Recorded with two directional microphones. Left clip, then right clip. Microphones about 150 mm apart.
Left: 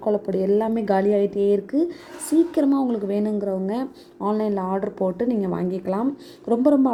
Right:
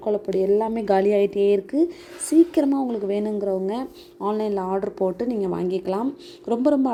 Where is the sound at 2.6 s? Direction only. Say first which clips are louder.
Left 1 dB; 10° right (ahead or behind).